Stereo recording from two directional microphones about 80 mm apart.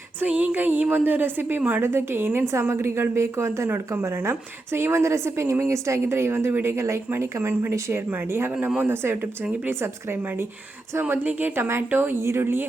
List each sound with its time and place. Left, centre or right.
0.2 s a woman's voice: right